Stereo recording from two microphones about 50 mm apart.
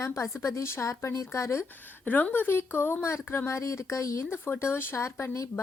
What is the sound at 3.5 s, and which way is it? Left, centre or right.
Speech, left.